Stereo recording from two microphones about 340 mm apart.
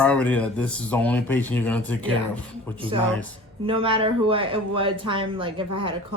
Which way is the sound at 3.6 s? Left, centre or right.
Centre.